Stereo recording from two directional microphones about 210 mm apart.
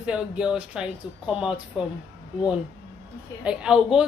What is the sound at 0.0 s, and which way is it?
Speech, 5° right (ahead or behind).